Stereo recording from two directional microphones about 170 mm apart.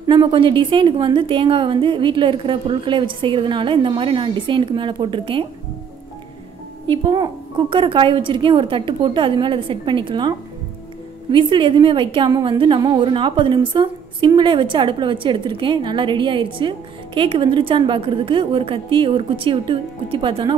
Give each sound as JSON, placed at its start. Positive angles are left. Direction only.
{"t": 0.0, "sound": "a woman's voice", "side_deg": -25}
{"t": 6.9, "sound": "a woman's voice", "side_deg": -30}
{"t": 11.3, "sound": "a woman's voice", "side_deg": -30}